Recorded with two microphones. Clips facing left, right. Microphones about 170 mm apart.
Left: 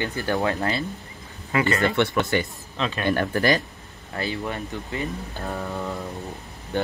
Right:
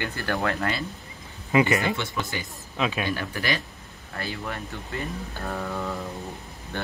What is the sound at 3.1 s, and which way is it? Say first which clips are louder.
Speech: left 7 dB; 50° left (ahead or behind).